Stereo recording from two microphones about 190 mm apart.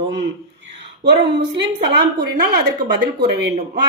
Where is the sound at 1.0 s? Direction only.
70° right (ahead or behind).